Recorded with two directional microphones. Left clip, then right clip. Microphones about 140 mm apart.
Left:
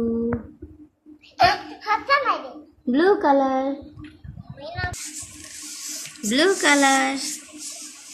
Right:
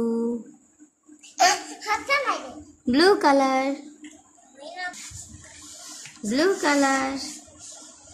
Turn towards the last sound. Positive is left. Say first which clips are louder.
# left 4 dB
turn(degrees=0)  # may be behind; listen again after turning